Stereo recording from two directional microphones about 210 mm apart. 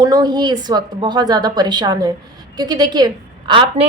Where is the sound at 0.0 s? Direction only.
20° right (ahead or behind).